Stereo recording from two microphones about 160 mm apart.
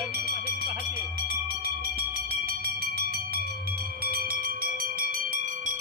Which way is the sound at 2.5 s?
75° right (ahead or behind).